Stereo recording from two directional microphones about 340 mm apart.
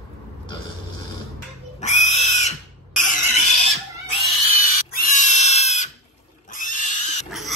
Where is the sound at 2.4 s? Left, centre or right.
Left.